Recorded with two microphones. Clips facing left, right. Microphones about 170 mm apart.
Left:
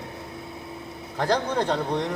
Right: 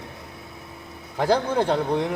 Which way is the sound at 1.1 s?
10° right (ahead or behind).